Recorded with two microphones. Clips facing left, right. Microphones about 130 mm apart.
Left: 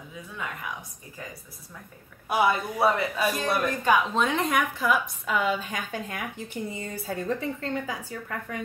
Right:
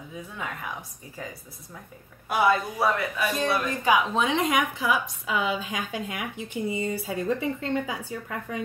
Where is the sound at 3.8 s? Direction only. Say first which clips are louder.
Right 1 dB; 10° right (ahead or behind).